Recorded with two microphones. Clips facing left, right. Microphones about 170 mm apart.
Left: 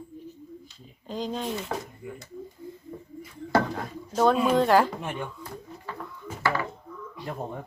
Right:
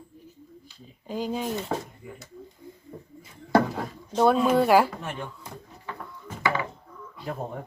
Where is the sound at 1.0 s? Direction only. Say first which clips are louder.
Right 2 dB; 10° right (ahead or behind).